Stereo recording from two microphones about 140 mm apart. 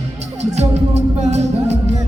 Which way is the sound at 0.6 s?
55° right (ahead or behind).